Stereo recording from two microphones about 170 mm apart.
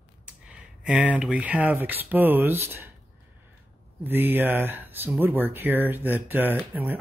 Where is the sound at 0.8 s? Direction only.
10° right (ahead or behind).